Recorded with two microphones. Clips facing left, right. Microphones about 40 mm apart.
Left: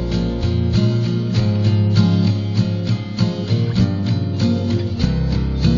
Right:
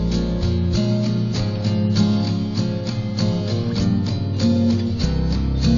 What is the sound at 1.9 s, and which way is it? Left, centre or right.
Music, centre.